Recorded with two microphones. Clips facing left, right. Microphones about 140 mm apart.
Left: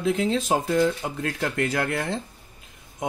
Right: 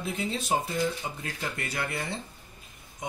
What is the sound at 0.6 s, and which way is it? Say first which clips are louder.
Speech: left 8 dB; 80° left.